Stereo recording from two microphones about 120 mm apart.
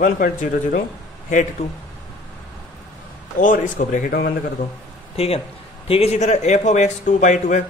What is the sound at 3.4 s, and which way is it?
Speech, 90° left.